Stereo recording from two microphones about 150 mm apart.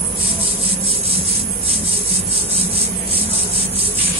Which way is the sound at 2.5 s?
40° right (ahead or behind).